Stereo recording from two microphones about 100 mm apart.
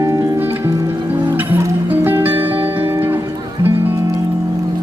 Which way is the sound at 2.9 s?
20° right (ahead or behind).